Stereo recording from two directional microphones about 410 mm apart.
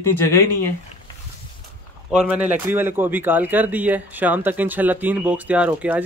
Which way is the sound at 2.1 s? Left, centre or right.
Centre.